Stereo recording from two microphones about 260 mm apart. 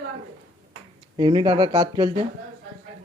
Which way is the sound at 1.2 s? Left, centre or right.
Centre.